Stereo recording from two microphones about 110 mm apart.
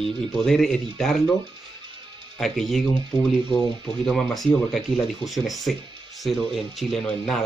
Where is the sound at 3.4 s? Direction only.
45° right (ahead or behind).